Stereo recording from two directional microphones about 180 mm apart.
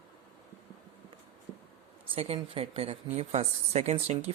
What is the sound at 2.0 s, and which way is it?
Speech, 35° right (ahead or behind).